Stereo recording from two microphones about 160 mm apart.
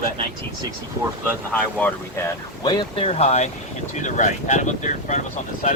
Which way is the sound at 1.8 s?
15° left (ahead or behind).